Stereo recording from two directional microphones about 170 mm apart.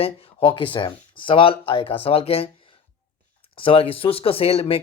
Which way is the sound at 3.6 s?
30° left (ahead or behind).